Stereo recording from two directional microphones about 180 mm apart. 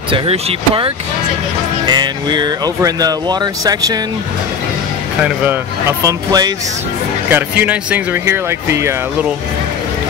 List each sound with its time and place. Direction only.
0.1 s speech: 30° right (ahead or behind)
5.2 s speech: 10° right (ahead or behind)